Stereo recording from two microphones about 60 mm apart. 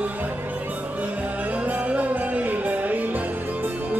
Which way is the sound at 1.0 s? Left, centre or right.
Right.